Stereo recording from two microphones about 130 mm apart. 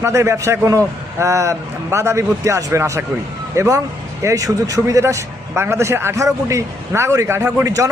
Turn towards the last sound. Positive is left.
turn(degrees=-25)  # may be behind; listen again after turning